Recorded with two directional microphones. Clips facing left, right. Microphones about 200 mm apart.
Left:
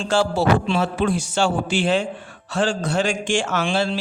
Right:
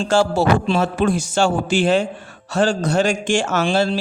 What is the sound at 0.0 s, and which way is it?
A man's voice, 45° right (ahead or behind).